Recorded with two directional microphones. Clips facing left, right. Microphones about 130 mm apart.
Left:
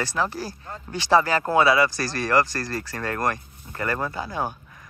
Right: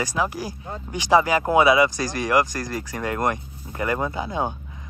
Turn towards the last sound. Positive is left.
turn(degrees=-20)  # may be behind; listen again after turning